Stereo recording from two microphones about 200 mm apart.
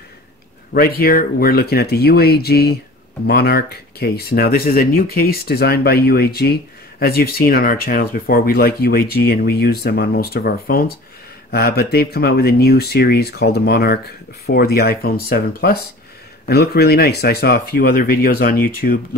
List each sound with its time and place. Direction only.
0.7 s speech: 50° left (ahead or behind)